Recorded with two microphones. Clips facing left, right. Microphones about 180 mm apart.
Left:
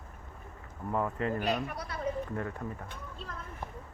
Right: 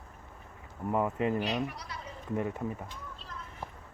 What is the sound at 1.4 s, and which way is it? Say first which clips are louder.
Speech: left 1 dB; 50° left (ahead or behind).